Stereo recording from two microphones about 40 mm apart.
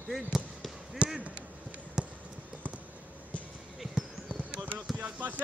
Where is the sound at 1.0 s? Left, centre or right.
Right.